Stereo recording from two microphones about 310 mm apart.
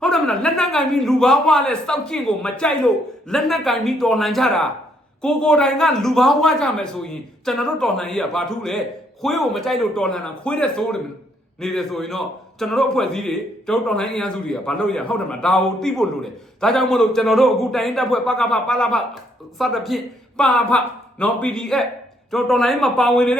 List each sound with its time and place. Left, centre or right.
0.0 s a man's voice: centre